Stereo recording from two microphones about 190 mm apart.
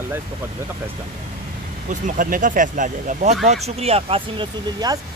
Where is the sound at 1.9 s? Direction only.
45° right (ahead or behind); by 5.0 s 25° right (ahead or behind).